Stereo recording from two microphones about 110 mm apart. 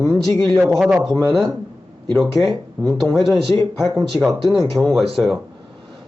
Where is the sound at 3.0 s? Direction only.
Centre (ahead or behind).